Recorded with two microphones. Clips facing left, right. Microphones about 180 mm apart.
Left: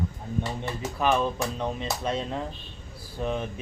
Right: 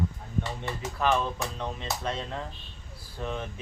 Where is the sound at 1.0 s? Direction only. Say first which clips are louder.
Left 2 dB; 15° left (ahead or behind).